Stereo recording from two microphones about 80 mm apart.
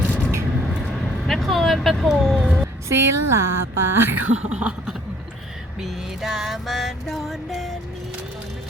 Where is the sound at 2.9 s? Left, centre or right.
Right.